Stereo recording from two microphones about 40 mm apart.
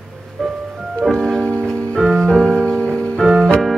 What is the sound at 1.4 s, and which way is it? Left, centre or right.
Music, left.